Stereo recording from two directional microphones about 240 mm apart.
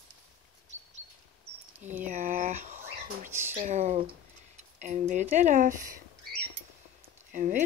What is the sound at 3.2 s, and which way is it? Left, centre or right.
Speech, centre.